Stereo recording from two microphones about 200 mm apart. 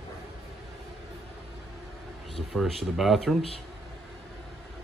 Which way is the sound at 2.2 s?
Centre (ahead or behind).